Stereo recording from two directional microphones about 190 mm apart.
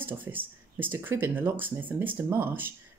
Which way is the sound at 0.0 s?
10° right (ahead or behind).